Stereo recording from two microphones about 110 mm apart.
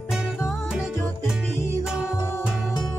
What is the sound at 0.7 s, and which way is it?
Music, 5° right (ahead or behind).